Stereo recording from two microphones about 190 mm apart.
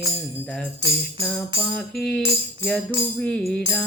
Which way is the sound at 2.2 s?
25° right (ahead or behind).